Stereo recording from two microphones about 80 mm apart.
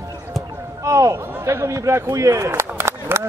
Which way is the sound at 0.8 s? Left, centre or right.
Right.